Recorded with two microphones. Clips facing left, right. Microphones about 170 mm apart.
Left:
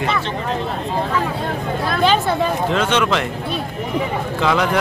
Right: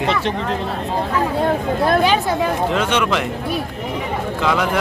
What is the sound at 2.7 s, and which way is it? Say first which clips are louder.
Speech: left 1 dB; 10° right (ahead or behind).